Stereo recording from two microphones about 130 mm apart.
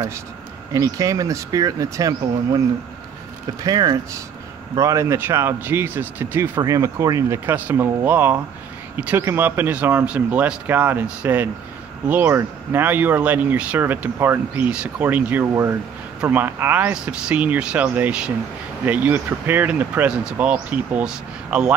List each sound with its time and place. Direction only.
0.7 s speech: 25° right (ahead or behind)
3.6 s speech: 30° right (ahead or behind); by 21.7 s 5° right (ahead or behind)